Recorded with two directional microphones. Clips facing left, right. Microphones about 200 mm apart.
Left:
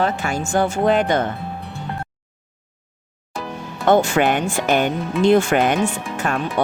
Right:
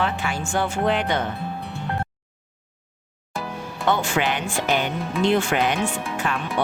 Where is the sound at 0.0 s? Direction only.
45° left (ahead or behind).